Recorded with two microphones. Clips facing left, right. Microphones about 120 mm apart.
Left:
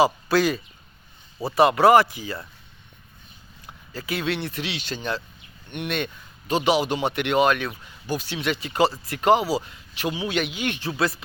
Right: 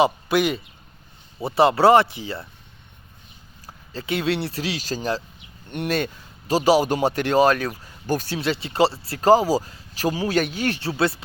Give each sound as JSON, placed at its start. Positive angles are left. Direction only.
{"t": 0.0, "sound": "speech", "side_deg": -20}
{"t": 3.7, "sound": "speech", "side_deg": -25}